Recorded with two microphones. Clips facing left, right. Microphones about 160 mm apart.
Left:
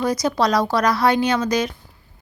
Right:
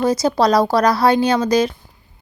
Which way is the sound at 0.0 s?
30° right (ahead or behind).